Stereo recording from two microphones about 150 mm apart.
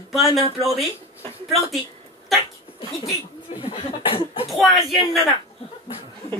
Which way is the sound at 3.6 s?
35° left (ahead or behind).